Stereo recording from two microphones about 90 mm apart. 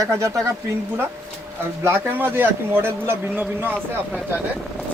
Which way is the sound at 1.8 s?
25° right (ahead or behind).